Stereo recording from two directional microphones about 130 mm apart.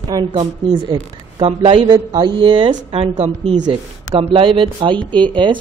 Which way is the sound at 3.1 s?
60° right (ahead or behind).